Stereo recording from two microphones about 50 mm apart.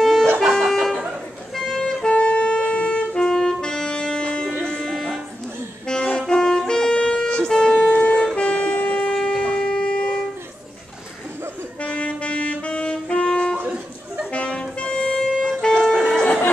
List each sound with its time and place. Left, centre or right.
0.0 s music: centre
2.0 s music: left
6.1 s saxophone: centre
8.4 s music: left
9.1 s wind instrument: centre
11.8 s music: left